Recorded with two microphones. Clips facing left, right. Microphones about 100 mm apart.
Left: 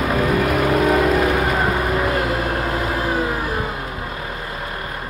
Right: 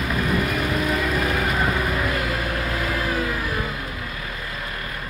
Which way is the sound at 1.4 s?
30° left (ahead or behind).